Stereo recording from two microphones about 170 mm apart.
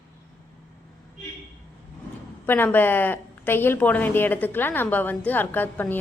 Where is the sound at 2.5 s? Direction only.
10° left (ahead or behind).